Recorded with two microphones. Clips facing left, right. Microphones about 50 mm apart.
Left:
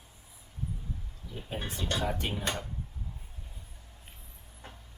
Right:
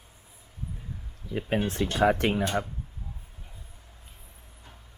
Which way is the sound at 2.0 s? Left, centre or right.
Right.